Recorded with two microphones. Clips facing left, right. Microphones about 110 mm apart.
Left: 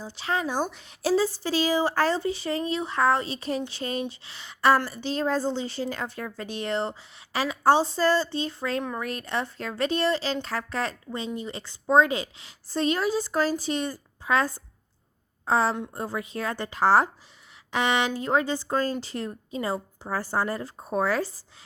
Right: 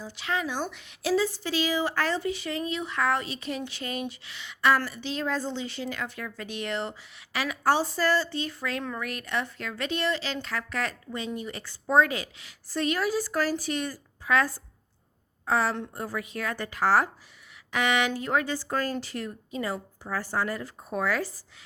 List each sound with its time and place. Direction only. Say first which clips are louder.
0.0 s a woman's voice: left 2 dB; 35° left (ahead or behind)